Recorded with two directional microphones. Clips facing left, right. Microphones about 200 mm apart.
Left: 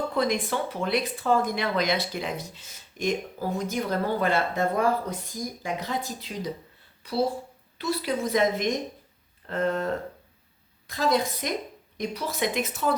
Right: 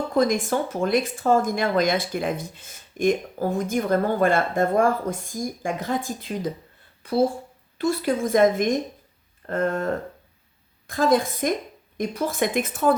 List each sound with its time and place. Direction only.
0.1 s speech: 45° right (ahead or behind)